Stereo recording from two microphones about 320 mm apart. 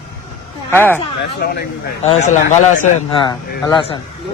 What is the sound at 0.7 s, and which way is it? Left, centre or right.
Speech, centre.